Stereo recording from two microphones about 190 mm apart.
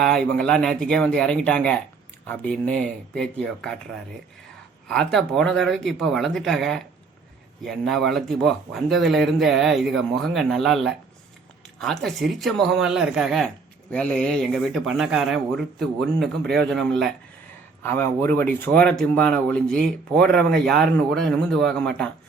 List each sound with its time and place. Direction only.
0.0 s speech: centre (ahead or behind)
4.9 s speech: centre (ahead or behind)